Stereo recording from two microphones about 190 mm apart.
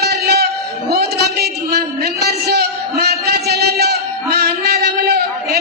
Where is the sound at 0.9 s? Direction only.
55° right (ahead or behind).